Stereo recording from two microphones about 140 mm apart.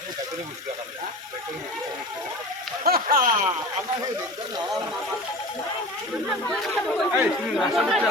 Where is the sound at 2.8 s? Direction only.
90° right.